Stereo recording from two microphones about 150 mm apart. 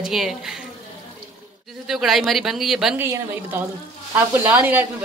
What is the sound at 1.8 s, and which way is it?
A woman's voice, centre (ahead or behind).